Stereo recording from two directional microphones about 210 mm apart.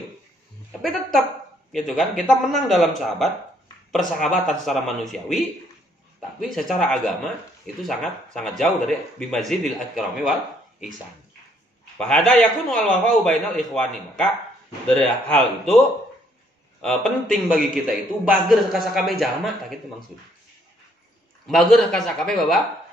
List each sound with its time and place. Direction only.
1.7 s speech: centre (ahead or behind)
6.4 s speech: centre (ahead or behind)
12.0 s speech: 5° left (ahead or behind)
16.8 s speech: centre (ahead or behind)
21.5 s speech: centre (ahead or behind)